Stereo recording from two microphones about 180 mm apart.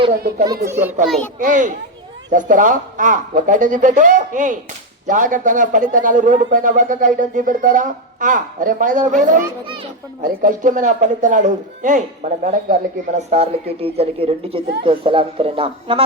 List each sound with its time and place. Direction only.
0.1 s speech: 55° right (ahead or behind)
0.7 s a child's voice: 10° right (ahead or behind)
1.0 s a child's voice: centre (ahead or behind)
1.4 s a man's voice: 45° right (ahead or behind)
13.3 s a woman's voice: 35° right (ahead or behind)